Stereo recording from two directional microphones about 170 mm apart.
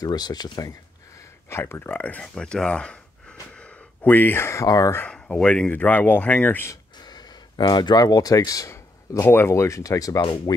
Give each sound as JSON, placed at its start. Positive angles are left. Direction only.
{"t": 0.0, "sound": "speech", "side_deg": 25}
{"t": 5.0, "sound": "speech", "side_deg": 5}